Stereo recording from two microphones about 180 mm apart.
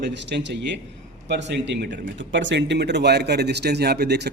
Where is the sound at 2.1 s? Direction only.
90° right; by 4.3 s 65° right (ahead or behind).